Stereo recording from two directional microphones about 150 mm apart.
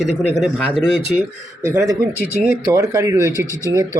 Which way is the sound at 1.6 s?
20° right (ahead or behind).